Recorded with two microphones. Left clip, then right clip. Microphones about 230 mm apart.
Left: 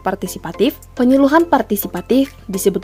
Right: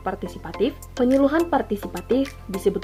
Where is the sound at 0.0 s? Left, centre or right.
Left.